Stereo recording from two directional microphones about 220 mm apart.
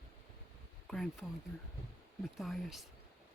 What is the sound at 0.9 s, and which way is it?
Speech, centre (ahead or behind).